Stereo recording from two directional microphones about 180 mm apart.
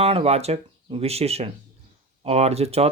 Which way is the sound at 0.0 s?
35° right (ahead or behind).